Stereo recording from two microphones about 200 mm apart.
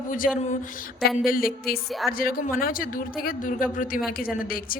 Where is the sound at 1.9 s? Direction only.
Centre (ahead or behind).